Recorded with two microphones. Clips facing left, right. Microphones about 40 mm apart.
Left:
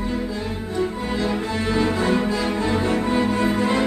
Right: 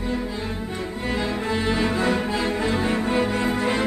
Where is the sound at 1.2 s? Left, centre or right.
Centre.